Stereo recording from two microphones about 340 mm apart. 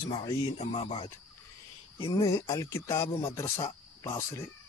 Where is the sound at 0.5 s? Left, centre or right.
Centre.